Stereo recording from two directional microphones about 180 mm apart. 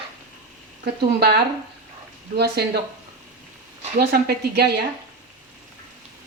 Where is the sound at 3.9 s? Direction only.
60° right (ahead or behind).